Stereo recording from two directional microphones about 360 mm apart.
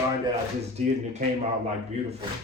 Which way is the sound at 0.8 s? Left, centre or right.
Centre.